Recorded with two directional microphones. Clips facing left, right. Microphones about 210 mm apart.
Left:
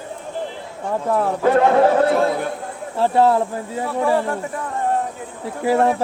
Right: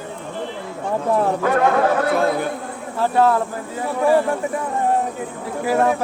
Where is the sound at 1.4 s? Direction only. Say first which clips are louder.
Left 3 dB; 30° left (ahead or behind).